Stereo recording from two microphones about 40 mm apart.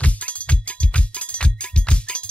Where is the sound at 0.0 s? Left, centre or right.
Left.